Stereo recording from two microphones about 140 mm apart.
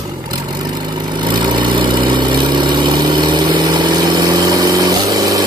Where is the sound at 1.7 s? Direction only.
35° right (ahead or behind).